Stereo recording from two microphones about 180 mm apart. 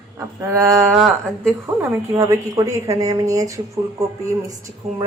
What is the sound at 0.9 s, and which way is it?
A woman's voice, centre (ahead or behind).